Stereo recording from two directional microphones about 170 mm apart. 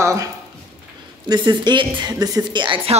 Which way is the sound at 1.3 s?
25° right (ahead or behind).